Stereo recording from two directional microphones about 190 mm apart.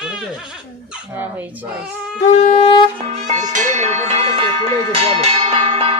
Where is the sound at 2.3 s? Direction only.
30° left (ahead or behind).